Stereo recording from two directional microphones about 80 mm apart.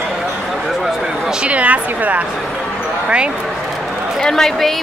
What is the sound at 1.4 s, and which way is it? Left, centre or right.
Speech, centre.